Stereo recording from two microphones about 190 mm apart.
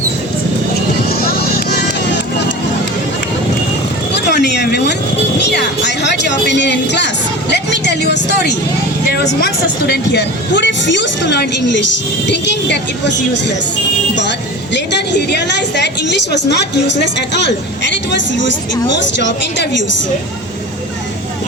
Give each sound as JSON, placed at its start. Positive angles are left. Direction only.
{"t": 1.3, "sound": "music", "side_deg": 55}
{"t": 4.1, "sound": "vehicle", "side_deg": 60}
{"t": 5.5, "sound": "a woman's voice", "side_deg": 60}